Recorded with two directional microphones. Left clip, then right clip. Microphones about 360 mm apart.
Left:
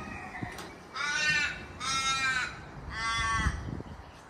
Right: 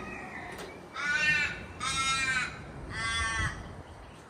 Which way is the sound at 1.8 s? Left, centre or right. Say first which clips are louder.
Even; left.